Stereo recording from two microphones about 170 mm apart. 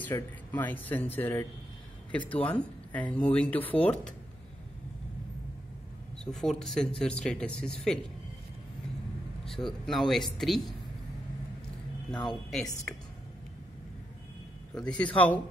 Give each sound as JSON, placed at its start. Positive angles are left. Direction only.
{"t": 0.0, "sound": "speech", "side_deg": 10}
{"t": 6.1, "sound": "speech", "side_deg": 5}
{"t": 9.4, "sound": "speech", "side_deg": 0}
{"t": 12.1, "sound": "speech", "side_deg": 25}
{"t": 12.9, "sound": "speech", "side_deg": 10}
{"t": 14.7, "sound": "speech", "side_deg": 5}